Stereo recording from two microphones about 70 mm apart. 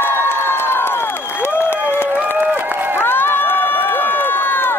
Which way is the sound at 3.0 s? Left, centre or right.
Left.